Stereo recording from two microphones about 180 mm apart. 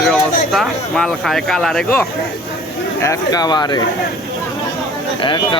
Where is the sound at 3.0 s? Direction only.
20° left (ahead or behind).